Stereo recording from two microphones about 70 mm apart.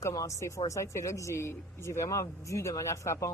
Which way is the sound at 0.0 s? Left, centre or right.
Left.